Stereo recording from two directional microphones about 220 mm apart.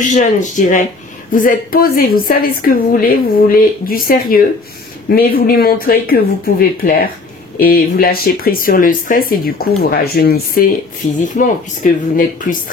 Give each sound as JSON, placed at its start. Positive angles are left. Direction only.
{"t": 0.0, "sound": "a woman's voice", "side_deg": 35}